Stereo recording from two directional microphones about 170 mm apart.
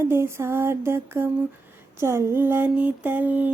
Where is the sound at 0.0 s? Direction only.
15° right (ahead or behind).